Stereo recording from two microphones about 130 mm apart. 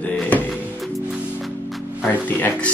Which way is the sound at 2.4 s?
15° left (ahead or behind).